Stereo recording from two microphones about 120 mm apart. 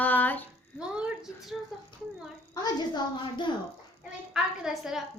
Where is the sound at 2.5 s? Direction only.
35° left (ahead or behind).